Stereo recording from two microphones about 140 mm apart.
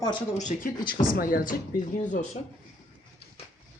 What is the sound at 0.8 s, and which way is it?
Speech, 90° left.